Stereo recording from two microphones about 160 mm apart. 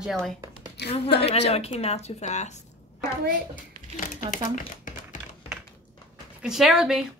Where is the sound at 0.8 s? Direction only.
90° left.